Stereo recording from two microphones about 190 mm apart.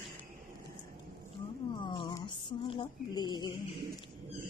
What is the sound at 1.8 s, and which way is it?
Speech, 25° left (ahead or behind).